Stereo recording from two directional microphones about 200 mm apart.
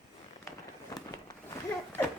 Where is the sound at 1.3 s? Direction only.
15° left (ahead or behind).